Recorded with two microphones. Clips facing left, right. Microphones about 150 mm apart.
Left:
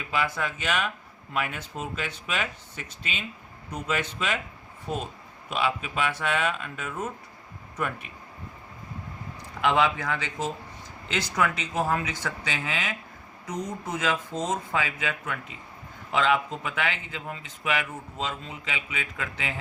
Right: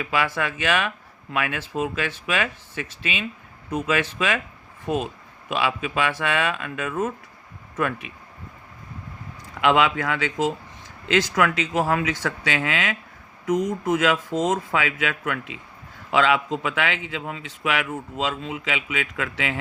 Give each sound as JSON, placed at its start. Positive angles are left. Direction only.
{"t": 0.0, "sound": "a man's voice", "side_deg": -90}
{"t": 3.7, "sound": "a man's voice", "side_deg": -90}
{"t": 4.9, "sound": "a man's voice", "side_deg": -80}
{"t": 9.6, "sound": "a man's voice", "side_deg": -90}